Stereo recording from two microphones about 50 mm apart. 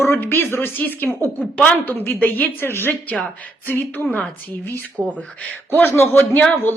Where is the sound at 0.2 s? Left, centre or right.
Left.